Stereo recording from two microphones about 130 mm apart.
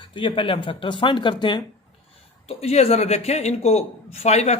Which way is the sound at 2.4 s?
50° left (ahead or behind).